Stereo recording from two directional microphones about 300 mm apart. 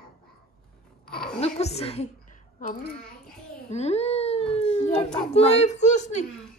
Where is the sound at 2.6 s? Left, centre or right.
Left.